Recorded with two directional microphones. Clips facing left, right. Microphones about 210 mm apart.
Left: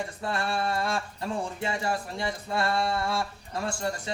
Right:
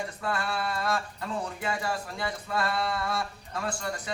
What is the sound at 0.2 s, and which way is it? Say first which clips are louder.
Speech: left 2 dB; 30° left (ahead or behind).